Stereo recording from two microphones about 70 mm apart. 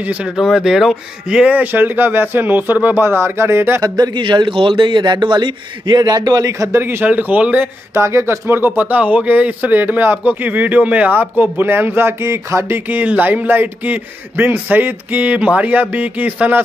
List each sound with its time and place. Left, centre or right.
0.0 s a man's voice: centre
0.4 s a man's voice: centre; by 3.8 s right
3.8 s a man's voice: right
6.7 s a man's voice: right
7.9 s a man's voice: right